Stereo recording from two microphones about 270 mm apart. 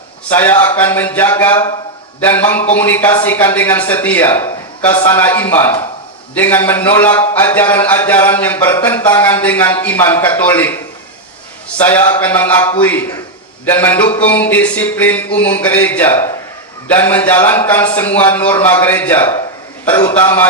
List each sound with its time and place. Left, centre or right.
0.3 s a man's voice: centre
11.8 s a man's voice: centre